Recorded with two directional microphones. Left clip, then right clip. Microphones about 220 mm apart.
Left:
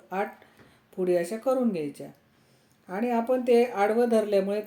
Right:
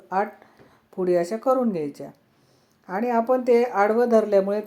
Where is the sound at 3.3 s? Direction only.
10° right (ahead or behind).